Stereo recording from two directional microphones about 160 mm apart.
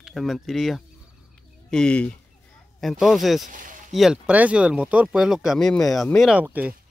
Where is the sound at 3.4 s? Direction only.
55° right (ahead or behind).